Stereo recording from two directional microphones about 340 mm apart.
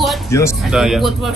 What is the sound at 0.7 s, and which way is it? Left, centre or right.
Speech, centre.